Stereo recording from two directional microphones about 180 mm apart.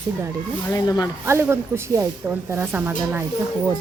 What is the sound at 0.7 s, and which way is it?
Speech, 20° left (ahead or behind).